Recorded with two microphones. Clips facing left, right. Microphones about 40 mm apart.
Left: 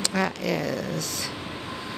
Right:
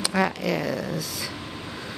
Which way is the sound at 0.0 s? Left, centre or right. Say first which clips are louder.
Right 2 dB; centre.